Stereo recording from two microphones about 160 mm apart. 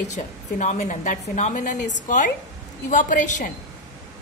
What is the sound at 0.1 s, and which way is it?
A woman's voice, 45° left (ahead or behind).